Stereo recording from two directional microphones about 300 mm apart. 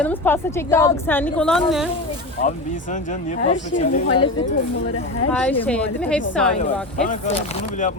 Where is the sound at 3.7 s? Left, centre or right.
Left.